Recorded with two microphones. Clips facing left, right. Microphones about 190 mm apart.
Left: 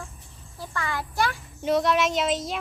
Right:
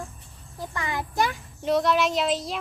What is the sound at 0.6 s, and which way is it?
Speech, 20° right (ahead or behind).